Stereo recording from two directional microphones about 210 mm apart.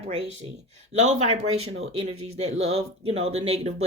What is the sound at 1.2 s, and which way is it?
Speech, 30° right (ahead or behind).